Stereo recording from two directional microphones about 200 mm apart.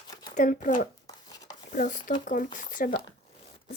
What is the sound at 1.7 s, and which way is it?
Speech, 40° left (ahead or behind).